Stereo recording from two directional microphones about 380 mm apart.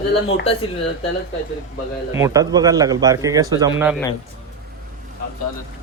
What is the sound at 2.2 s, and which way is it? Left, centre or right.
A man's voice, centre.